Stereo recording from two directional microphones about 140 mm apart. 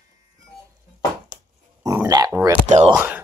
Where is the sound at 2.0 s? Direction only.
25° right (ahead or behind).